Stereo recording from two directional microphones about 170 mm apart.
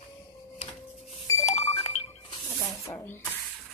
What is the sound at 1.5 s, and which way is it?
Music, 45° left (ahead or behind).